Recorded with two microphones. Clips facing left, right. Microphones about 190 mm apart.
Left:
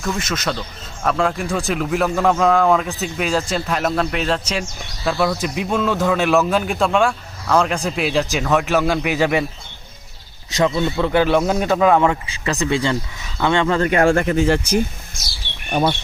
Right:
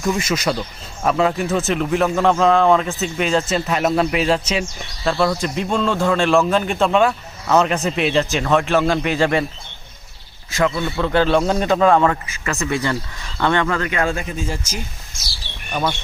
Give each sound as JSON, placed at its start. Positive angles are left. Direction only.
{"t": 0.0, "sound": "speech", "side_deg": -10}
{"t": 10.5, "sound": "a man's voice", "side_deg": 20}
{"t": 13.7, "sound": "speech", "side_deg": 40}
{"t": 14.1, "sound": "speech", "side_deg": 70}